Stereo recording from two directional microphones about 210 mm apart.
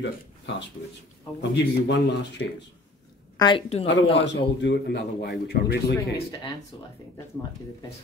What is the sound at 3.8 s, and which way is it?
A man's voice, 60° left (ahead or behind).